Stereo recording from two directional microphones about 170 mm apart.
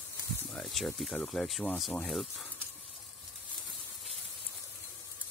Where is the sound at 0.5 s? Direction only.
Centre (ahead or behind).